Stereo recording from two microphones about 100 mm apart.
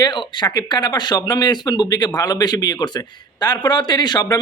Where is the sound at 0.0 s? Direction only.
50° left (ahead or behind).